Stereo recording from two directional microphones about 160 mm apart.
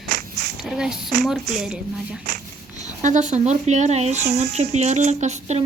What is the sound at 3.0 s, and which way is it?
Speech, 50° right (ahead or behind).